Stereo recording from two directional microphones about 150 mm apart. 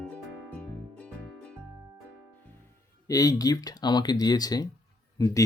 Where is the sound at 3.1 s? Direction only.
25° left (ahead or behind).